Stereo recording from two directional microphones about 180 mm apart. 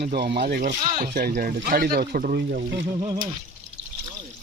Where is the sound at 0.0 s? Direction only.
60° right (ahead or behind).